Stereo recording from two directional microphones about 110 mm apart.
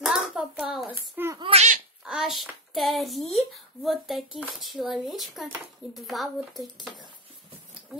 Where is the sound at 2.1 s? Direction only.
5° right (ahead or behind).